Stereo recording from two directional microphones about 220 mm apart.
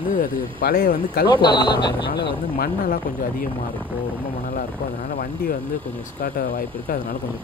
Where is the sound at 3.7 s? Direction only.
10° right (ahead or behind).